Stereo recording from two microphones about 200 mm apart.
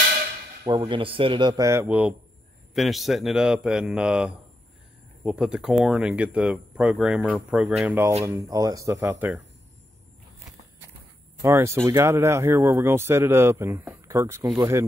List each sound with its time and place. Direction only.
0.7 s speech: 25° right (ahead or behind)
11.4 s speech: 15° right (ahead or behind)